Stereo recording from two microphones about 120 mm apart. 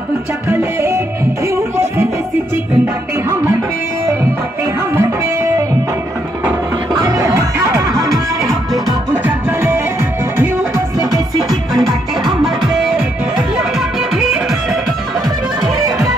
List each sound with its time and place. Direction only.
0.5 s music: 20° right (ahead or behind)
4.7 s music: 20° right (ahead or behind)
6.9 s music: 30° right (ahead or behind)
9.2 s music: 20° right (ahead or behind)
12.3 s music: 5° right (ahead or behind)